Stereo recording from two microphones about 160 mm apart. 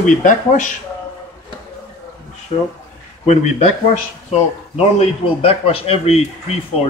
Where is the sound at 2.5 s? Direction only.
40° left (ahead or behind).